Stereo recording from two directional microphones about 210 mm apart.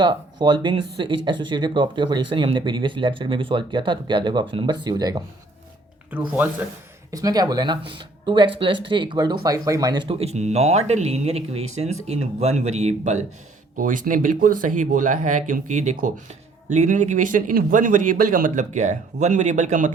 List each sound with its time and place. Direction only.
0.0 s speech: 20° right (ahead or behind)
6.1 s speech: 10° right (ahead or behind); by 19.9 s 35° right (ahead or behind)